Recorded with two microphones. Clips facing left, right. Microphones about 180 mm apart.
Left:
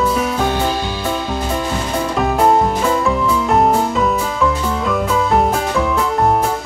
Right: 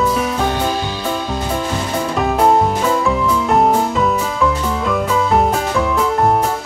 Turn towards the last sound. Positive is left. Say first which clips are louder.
# even
turn(degrees=0)  # may be behind; listen again after turning